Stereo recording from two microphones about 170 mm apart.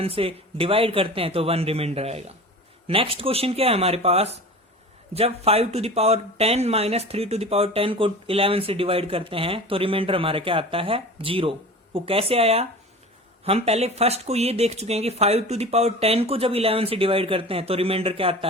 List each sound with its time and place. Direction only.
0.0 s speech: 35° right (ahead or behind)